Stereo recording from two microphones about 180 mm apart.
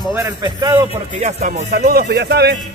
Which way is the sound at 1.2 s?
40° right (ahead or behind).